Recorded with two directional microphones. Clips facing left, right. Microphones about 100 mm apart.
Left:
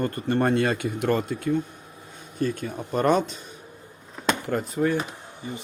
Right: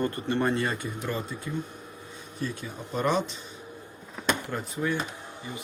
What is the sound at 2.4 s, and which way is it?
Speech, 50° left (ahead or behind).